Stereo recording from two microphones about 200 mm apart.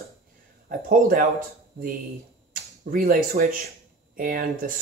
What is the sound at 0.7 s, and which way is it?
Speech, 45° right (ahead or behind).